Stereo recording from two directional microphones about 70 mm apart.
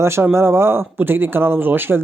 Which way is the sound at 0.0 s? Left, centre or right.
Right.